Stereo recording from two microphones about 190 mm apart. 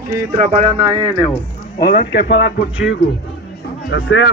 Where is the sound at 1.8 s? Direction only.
55° left (ahead or behind).